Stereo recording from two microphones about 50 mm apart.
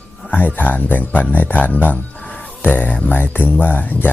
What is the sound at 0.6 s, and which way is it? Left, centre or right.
Speech, left.